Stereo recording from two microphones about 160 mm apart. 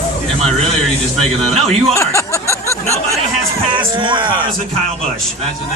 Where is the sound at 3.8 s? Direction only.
30° right (ahead or behind).